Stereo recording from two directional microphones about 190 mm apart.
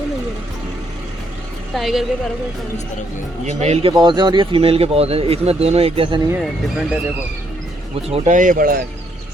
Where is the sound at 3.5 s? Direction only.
35° right (ahead or behind).